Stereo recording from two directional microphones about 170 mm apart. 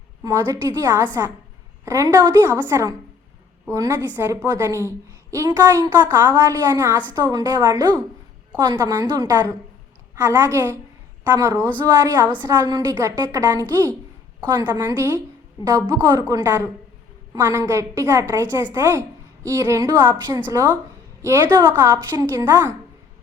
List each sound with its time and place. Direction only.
0.2 s a woman's voice: 20° right (ahead or behind)
11.9 s a woman's voice: 25° right (ahead or behind)